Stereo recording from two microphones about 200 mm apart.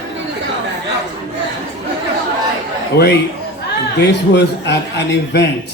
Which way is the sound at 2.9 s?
55° left (ahead or behind).